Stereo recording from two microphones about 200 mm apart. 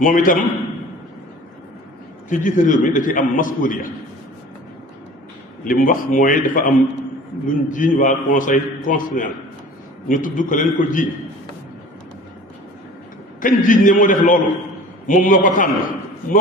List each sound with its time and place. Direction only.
0.0 s a man's voice: 45° left (ahead or behind)
2.3 s a man's voice: 40° left (ahead or behind)
5.6 s a man's voice: 45° left (ahead or behind)
13.4 s a man's voice: 40° left (ahead or behind)